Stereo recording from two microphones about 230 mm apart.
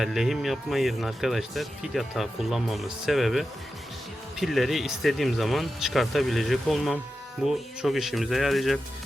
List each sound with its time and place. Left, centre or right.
0.0 s speech: centre